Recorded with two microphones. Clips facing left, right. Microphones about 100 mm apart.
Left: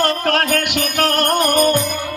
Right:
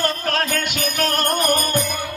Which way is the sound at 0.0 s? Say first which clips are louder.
Left 5 dB; 70° left (ahead or behind).